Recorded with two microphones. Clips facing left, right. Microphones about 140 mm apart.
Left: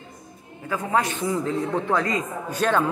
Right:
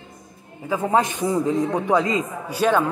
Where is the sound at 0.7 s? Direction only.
20° right (ahead or behind).